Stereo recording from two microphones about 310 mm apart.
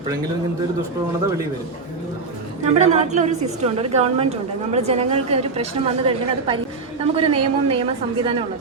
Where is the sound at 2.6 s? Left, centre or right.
Right.